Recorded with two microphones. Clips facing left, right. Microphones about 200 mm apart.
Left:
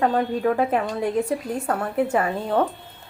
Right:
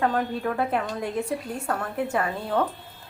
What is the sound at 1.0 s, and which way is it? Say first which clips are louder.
A woman's voice: left 5 dB; 15° left (ahead or behind).